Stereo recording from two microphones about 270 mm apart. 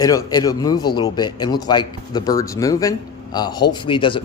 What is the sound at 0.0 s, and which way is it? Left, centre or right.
Speech, centre.